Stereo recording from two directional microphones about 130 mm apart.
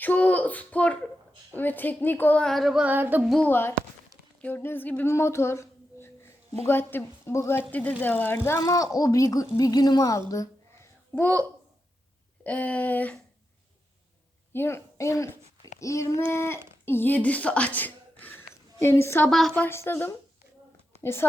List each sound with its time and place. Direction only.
0.0 s a woman's voice: 10° left (ahead or behind)
2.8 s a sound: 15° right (ahead or behind)
3.2 s a woman's voice: 5° left (ahead or behind)
3.5 s a woman's voice: 15° left (ahead or behind)
14.5 s speech: 20° left (ahead or behind)
19.3 s a woman's voice: 5° left (ahead or behind)
19.6 s a woman's voice: 20° left (ahead or behind)